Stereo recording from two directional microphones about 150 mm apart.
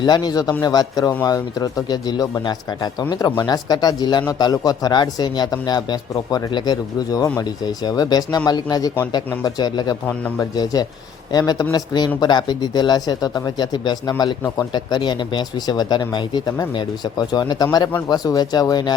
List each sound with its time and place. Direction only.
0.0 s speech: 30° left (ahead or behind)